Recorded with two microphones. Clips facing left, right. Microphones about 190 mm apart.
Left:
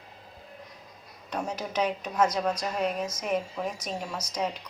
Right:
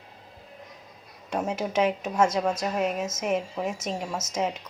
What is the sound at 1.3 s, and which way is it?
Speech, 25° right (ahead or behind).